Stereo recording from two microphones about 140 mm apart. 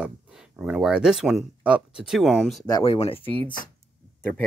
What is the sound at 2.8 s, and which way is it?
Speech, 45° left (ahead or behind).